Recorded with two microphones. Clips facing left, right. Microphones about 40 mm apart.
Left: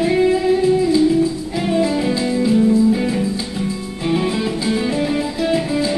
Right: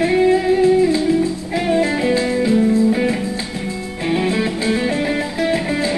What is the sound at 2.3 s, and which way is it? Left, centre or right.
Music, right.